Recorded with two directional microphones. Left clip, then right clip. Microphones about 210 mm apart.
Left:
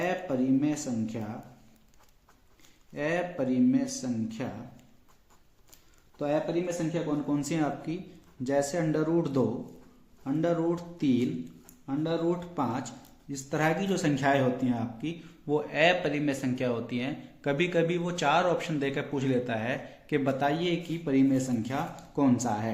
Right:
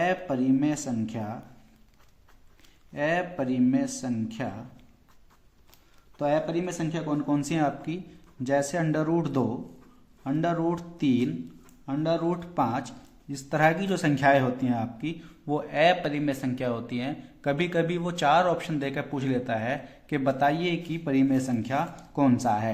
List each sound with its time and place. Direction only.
0.0 s speech: 40° right (ahead or behind)
2.9 s speech: 35° right (ahead or behind)
6.1 s speech: 40° right (ahead or behind)